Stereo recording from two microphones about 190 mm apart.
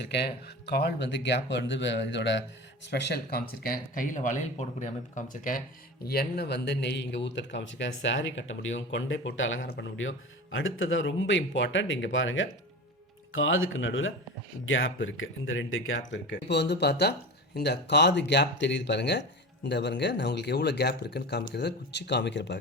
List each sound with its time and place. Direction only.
0.0 s speech: 60° left (ahead or behind)
2.9 s speech: 60° left (ahead or behind); by 9.6 s 85° left
9.6 s speech: 65° left (ahead or behind)